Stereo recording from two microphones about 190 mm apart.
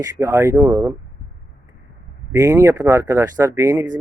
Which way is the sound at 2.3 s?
15° right (ahead or behind).